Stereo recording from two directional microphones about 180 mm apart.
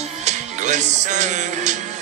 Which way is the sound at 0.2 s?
40° right (ahead or behind).